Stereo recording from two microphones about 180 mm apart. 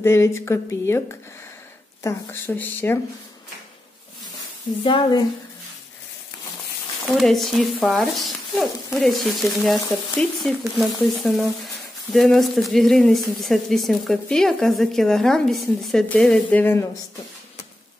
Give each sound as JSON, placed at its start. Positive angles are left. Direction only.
{"t": 0.0, "sound": "speech", "side_deg": 15}
{"t": 2.0, "sound": "speech", "side_deg": 10}
{"t": 4.8, "sound": "speech", "side_deg": 25}
{"t": 7.2, "sound": "speech", "side_deg": 0}